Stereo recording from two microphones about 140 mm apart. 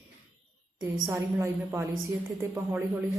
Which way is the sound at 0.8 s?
15° right (ahead or behind).